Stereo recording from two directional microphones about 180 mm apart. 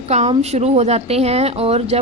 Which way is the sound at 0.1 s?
35° right (ahead or behind).